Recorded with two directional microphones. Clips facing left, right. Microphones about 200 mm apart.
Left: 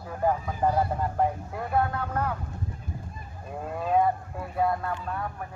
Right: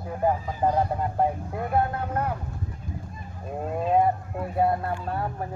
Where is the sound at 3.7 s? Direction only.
25° right (ahead or behind).